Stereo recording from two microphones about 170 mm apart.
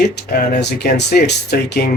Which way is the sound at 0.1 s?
70° left (ahead or behind).